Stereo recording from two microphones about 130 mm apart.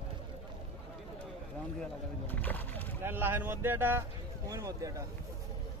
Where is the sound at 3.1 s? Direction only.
15° right (ahead or behind).